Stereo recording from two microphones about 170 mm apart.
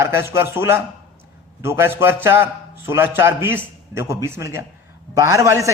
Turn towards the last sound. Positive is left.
turn(degrees=-20)  # may be behind; listen again after turning